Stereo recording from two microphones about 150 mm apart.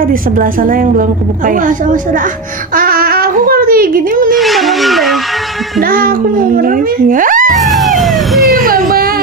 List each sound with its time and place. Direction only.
0.1 s a woman's voice: 65° right (ahead or behind)
2.7 s a sound: 75° right (ahead or behind)
4.4 s a sound: centre (ahead or behind)
5.8 s speech: 75° right (ahead or behind)
7.5 s emergency vehicle: centre (ahead or behind)
8.5 s baby cry: 65° right (ahead or behind)